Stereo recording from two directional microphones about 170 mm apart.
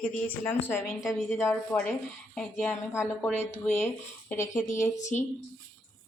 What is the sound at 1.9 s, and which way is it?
Speech, 5° left (ahead or behind).